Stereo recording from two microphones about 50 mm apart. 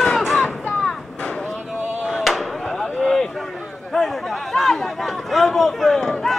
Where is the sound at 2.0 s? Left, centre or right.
Centre.